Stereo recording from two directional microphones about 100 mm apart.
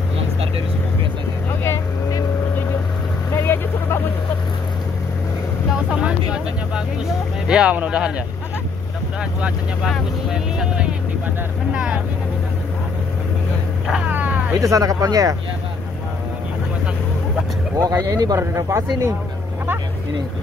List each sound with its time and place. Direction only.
1.6 s vehicle: 30° left (ahead or behind)
3.3 s vehicle: 25° left (ahead or behind)
5.7 s vehicle: 10° right (ahead or behind)
7.4 s speech: 10° right (ahead or behind)
10.3 s speech: 10° right (ahead or behind)
14.0 s a sound: 15° right (ahead or behind)
14.6 s speech: 35° right (ahead or behind)
17.7 s speech: 40° right (ahead or behind)
18.4 s speech: 30° right (ahead or behind)